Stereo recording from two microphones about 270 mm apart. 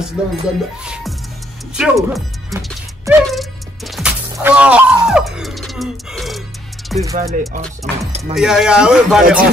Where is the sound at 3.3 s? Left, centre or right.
Centre.